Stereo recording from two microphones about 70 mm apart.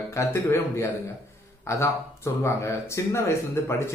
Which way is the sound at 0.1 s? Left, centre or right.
Left.